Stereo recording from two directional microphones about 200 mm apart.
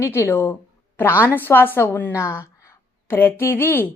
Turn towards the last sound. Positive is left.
turn(degrees=10)  # may be behind; listen again after turning